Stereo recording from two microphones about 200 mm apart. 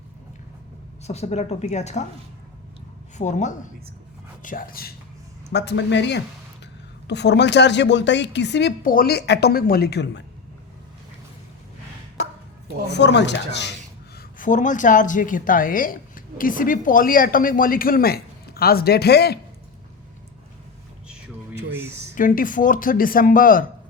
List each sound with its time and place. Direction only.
1.0 s a woman's voice: 35° left (ahead or behind)
3.2 s a woman's voice: 35° left (ahead or behind)
4.4 s a woman's voice: 45° left (ahead or behind)
5.5 s a woman's voice: 60° left (ahead or behind)
12.9 s a woman's voice: 60° left (ahead or behind)
14.2 s a woman's voice: 40° left (ahead or behind)
22.1 s a woman's voice: 45° left (ahead or behind)